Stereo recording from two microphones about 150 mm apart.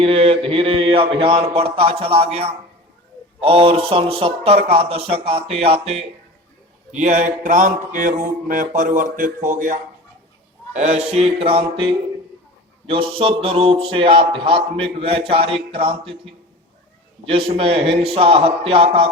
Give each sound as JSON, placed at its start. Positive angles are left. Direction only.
{"t": 0.0, "sound": "speech", "side_deg": -40}
{"t": 7.0, "sound": "mantra", "side_deg": -55}
{"t": 10.8, "sound": "a sound", "side_deg": -50}
{"t": 11.1, "sound": "speech", "side_deg": -40}
{"t": 17.2, "sound": "speech", "side_deg": -40}